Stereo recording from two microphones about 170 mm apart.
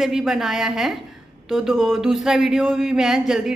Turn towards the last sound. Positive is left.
turn(degrees=0)  # may be behind; listen again after turning